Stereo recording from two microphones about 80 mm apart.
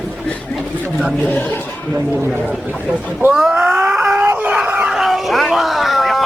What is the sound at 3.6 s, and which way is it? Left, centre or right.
Wail, centre.